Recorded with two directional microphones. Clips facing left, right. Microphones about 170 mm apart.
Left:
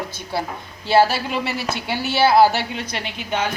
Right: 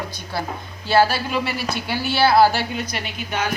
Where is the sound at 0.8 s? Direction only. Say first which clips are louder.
Left 1 dB; 25° left (ahead or behind).